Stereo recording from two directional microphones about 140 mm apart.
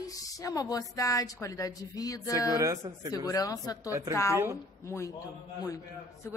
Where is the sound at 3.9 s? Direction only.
20° right (ahead or behind).